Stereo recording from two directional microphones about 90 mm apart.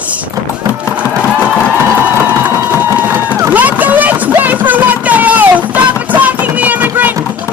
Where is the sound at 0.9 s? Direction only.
15° right (ahead or behind).